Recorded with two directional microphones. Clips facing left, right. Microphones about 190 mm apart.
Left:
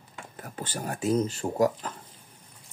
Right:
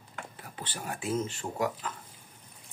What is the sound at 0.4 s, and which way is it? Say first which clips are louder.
Speech: left 8 dB; 45° left (ahead or behind).